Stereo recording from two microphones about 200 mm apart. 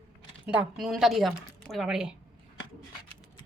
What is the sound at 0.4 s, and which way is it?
A woman's voice, 5° right (ahead or behind).